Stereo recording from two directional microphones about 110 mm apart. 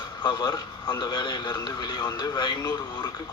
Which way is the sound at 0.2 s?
40° left (ahead or behind).